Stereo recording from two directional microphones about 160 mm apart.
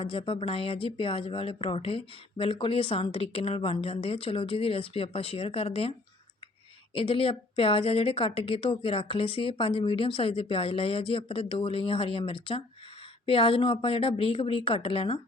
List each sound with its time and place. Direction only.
0.0 s speech: 35° left (ahead or behind)
6.9 s speech: 35° left (ahead or behind)